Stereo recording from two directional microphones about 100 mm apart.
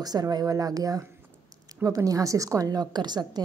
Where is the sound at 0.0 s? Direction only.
40° right (ahead or behind).